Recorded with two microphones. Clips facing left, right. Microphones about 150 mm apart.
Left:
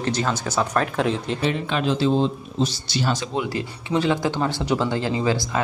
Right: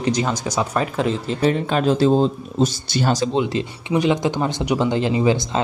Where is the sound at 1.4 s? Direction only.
40° right (ahead or behind).